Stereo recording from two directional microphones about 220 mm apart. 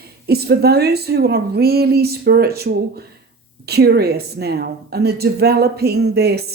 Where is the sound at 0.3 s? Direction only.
45° right (ahead or behind).